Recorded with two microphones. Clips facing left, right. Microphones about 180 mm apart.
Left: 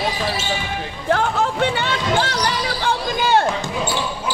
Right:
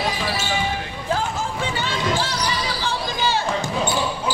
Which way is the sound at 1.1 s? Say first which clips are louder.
Left 6 dB; 65° left (ahead or behind).